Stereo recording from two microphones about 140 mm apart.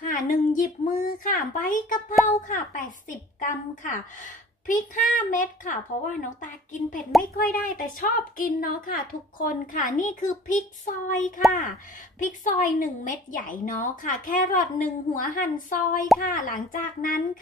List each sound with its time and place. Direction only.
0.1 s a woman's voice: 75° left (ahead or behind)
7.3 s a woman's voice: 90° left